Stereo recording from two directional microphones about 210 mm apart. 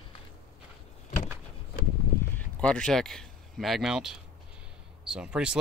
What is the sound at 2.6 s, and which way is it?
Speech, 5° left (ahead or behind).